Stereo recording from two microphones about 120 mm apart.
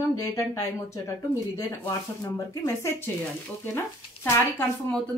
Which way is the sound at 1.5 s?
20° left (ahead or behind).